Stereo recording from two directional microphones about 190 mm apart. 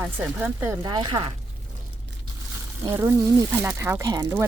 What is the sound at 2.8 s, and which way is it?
Speech, 15° right (ahead or behind).